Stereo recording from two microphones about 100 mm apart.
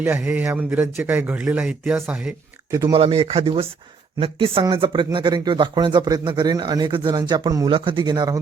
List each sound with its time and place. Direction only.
0.0 s a man's voice: 20° right (ahead or behind)
2.9 s speech: 80° right; by 7.7 s 45° right (ahead or behind)
7.7 s speech: 55° right (ahead or behind)